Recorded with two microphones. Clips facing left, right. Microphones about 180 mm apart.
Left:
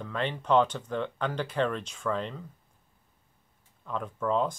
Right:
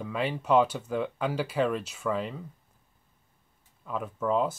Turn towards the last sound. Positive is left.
turn(degrees=-5)  # may be behind; listen again after turning